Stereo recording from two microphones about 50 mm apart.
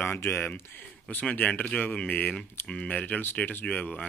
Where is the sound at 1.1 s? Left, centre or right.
Left.